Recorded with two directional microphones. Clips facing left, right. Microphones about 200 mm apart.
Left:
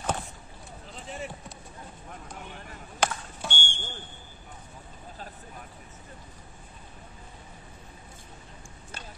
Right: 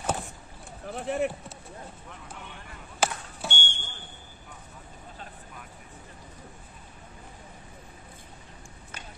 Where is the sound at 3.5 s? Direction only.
30° left (ahead or behind).